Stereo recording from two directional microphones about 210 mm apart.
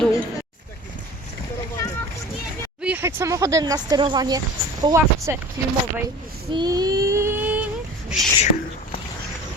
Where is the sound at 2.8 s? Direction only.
10° right (ahead or behind).